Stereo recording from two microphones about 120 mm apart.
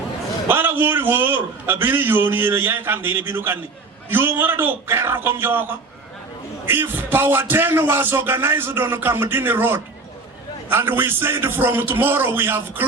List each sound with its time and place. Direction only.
0.4 s a man's voice: 15° right (ahead or behind)